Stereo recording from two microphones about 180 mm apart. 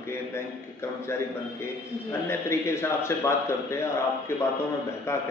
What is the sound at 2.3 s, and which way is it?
A man's voice, 15° left (ahead or behind).